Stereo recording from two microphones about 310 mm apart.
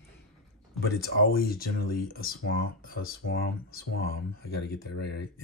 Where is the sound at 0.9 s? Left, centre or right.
Left.